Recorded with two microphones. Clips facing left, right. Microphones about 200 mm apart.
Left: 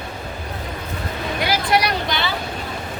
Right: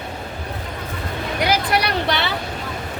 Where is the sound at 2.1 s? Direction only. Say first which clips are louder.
Right 2 dB; 65° right (ahead or behind).